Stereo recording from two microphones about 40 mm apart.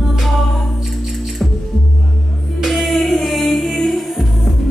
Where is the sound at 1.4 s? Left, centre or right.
Centre.